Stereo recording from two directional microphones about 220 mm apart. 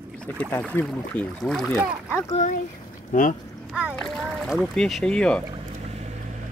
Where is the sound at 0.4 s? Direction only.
5° left (ahead or behind).